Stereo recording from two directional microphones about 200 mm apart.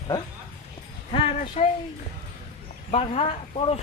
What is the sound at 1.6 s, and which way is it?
Speech, 30° left (ahead or behind).